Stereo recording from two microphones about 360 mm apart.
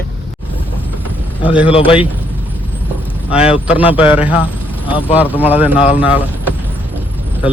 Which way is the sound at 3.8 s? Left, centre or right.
Centre.